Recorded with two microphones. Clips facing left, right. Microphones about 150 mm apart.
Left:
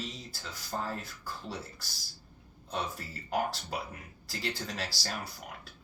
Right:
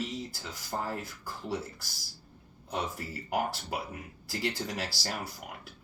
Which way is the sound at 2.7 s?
15° right (ahead or behind).